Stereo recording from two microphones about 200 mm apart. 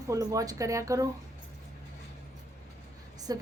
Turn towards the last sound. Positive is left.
turn(degrees=-20)  # may be behind; listen again after turning